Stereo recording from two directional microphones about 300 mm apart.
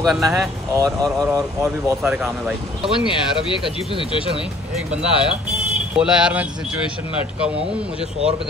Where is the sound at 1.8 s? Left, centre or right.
Centre.